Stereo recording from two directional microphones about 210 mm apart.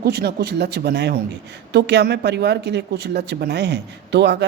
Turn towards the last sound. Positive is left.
turn(degrees=-55)  # may be behind; listen again after turning